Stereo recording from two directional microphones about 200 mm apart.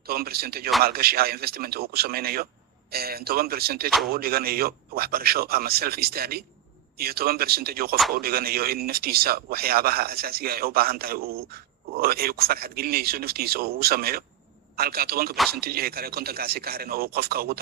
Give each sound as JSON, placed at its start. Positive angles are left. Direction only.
{"t": 0.0, "sound": "speech", "side_deg": -50}
{"t": 3.8, "sound": "speech", "side_deg": 0}
{"t": 4.1, "sound": "speech", "side_deg": -50}